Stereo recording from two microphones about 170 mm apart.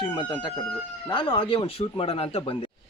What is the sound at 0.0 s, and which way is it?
Speech, 25° left (ahead or behind).